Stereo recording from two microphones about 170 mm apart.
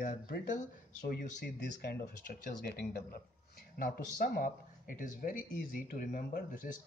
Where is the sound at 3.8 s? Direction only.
55° left (ahead or behind).